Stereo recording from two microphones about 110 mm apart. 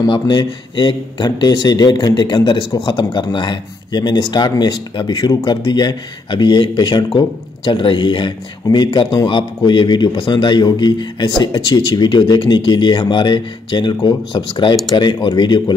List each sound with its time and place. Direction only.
0.0 s a man's voice: 40° left (ahead or behind)
7.1 s a man's voice: 45° left (ahead or behind)